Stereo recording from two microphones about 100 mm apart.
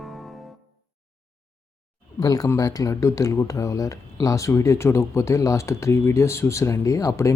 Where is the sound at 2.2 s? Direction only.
35° left (ahead or behind).